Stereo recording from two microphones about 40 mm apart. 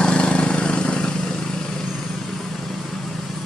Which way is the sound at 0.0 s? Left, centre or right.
Left.